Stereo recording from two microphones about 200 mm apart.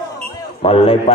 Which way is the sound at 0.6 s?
30° left (ahead or behind).